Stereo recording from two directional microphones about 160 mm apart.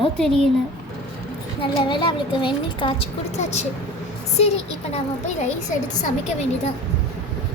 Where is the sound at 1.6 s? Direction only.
30° left (ahead or behind).